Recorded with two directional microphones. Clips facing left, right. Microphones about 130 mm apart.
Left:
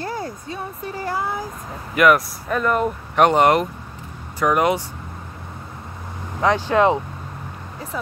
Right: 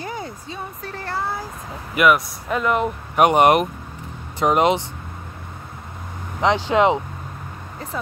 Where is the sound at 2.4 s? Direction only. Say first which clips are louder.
Even; 10° right (ahead or behind).